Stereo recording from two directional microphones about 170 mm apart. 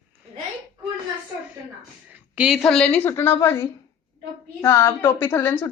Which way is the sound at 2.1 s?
5° right (ahead or behind).